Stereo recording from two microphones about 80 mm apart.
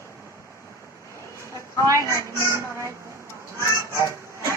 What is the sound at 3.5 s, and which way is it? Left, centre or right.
Honk, right.